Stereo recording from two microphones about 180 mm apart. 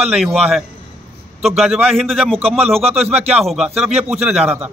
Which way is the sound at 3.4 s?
Centre (ahead or behind).